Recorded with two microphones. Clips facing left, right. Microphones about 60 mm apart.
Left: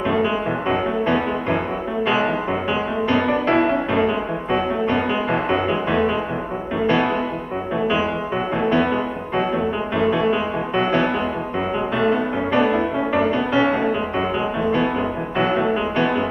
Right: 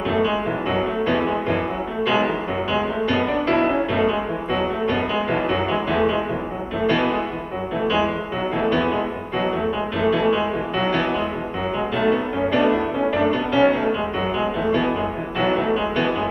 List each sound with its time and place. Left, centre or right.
0.1 s music: left
2.7 s music: left
8.5 s music: centre
9.9 s music: centre
12.5 s music: left
15.3 s music: left